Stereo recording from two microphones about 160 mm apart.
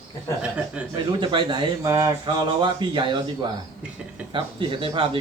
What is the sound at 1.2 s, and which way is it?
Speech, 30° right (ahead or behind).